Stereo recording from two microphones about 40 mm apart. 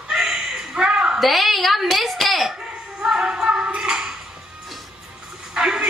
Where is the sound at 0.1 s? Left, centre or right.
Centre.